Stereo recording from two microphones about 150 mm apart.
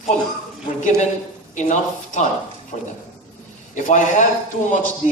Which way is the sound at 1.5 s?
55° left (ahead or behind).